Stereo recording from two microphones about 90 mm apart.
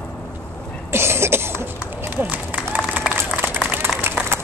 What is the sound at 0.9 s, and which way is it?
Cough, 30° right (ahead or behind).